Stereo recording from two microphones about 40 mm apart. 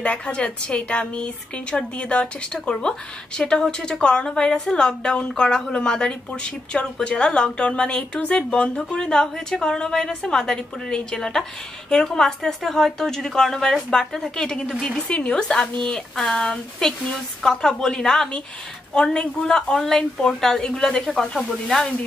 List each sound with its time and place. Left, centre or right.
0.0 s a woman's voice: left; by 20.7 s centre
20.7 s a woman's voice: left